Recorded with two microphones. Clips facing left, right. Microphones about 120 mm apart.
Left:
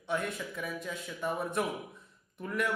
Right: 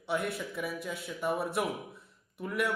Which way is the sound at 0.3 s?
5° right (ahead or behind).